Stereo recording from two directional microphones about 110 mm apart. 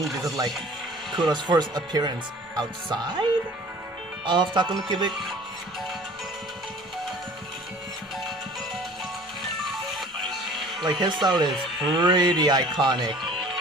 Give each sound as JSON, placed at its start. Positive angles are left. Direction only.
{"t": 0.0, "sound": "speech", "side_deg": 0}
{"t": 1.1, "sound": "speech", "side_deg": -40}
{"t": 4.3, "sound": "speech", "side_deg": -45}
{"t": 9.7, "sound": "music", "side_deg": 0}
{"t": 10.8, "sound": "speech", "side_deg": -40}